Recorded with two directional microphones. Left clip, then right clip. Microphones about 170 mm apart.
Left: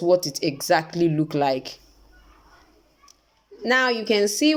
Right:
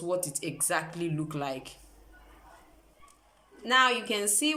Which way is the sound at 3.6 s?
35° left (ahead or behind).